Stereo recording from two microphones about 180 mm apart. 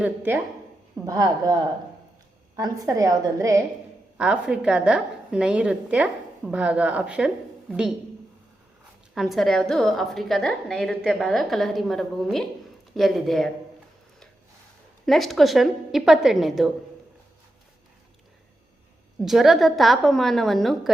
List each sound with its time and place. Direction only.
0.0 s a woman's voice: 10° right (ahead or behind)
2.6 s a woman's voice: 20° right (ahead or behind)
4.2 s a woman's voice: 5° right (ahead or behind)
9.1 s a woman's voice: centre (ahead or behind)
15.0 s a woman's voice: centre (ahead or behind)
19.2 s a woman's voice: centre (ahead or behind)